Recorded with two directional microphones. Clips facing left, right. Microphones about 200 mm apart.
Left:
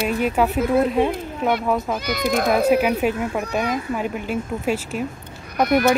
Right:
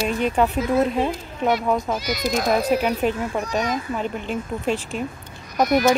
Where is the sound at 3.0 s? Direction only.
5° left (ahead or behind).